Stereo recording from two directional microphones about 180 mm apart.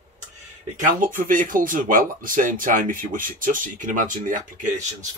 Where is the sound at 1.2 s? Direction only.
50° right (ahead or behind).